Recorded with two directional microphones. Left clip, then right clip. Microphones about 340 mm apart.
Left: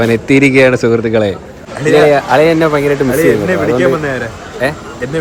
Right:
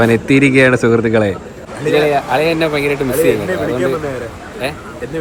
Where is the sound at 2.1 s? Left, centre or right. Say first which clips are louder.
Left 5 dB; centre.